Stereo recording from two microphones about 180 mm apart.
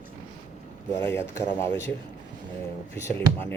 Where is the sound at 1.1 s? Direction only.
15° left (ahead or behind).